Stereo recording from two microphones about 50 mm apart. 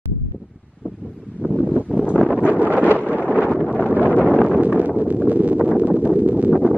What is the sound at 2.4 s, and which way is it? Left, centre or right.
Wind noise, right.